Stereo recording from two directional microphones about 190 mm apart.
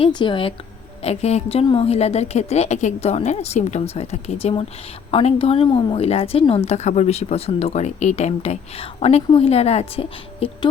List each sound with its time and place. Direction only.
0.0 s speech: 25° left (ahead or behind)